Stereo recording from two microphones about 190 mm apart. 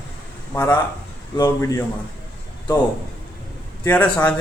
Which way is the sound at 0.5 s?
10° left (ahead or behind).